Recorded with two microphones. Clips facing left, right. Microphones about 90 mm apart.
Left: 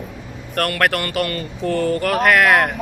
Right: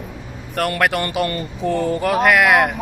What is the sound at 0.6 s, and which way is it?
Speech, 15° right (ahead or behind).